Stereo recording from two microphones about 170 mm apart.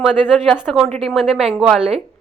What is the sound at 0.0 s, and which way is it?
A woman's voice, 5° right (ahead or behind).